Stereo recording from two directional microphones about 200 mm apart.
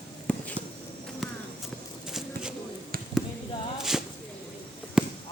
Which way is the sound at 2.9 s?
50° right (ahead or behind).